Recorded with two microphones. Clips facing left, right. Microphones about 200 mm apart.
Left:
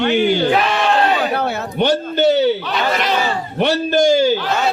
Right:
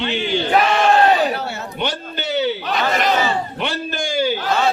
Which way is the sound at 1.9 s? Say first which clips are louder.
Left 11 dB; 40° left (ahead or behind).